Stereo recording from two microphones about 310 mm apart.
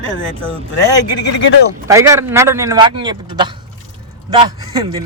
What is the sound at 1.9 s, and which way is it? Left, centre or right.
A man's voice, centre.